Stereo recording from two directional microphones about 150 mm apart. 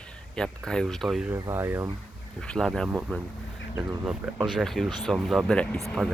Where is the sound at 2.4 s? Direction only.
5° left (ahead or behind).